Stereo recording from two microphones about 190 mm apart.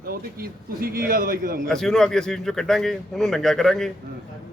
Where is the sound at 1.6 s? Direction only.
Centre (ahead or behind).